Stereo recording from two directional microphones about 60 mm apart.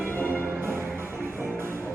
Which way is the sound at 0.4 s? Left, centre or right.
Right.